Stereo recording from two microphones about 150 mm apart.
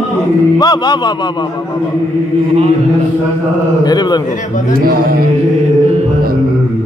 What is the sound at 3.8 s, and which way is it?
Speech, 25° left (ahead or behind).